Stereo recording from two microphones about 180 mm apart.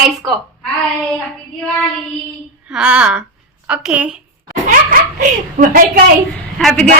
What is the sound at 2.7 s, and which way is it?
A woman's voice, 5° right (ahead or behind).